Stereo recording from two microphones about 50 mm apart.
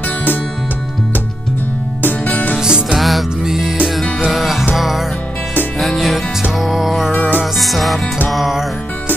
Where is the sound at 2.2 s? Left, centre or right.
Left.